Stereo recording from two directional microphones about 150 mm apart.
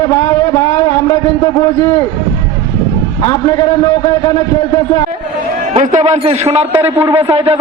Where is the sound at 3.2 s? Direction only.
25° left (ahead or behind).